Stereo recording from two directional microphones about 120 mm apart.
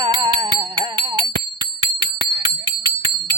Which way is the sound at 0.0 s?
40° right (ahead or behind).